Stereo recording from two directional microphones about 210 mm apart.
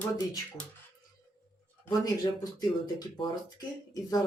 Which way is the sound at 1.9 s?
20° left (ahead or behind).